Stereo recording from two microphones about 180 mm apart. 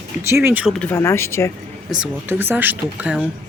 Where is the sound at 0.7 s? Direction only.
15° left (ahead or behind).